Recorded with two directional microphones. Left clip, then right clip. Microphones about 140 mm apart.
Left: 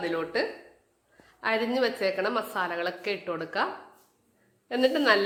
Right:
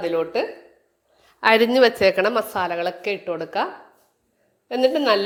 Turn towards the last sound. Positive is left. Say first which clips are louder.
# right 5 dB
turn(degrees=-25)  # may be behind; listen again after turning